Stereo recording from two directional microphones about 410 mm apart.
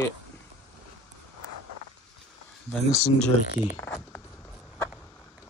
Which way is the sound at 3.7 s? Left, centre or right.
Centre.